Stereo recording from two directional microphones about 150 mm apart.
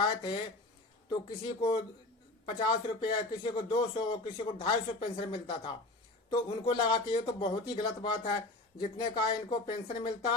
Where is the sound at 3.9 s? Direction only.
35° left (ahead or behind).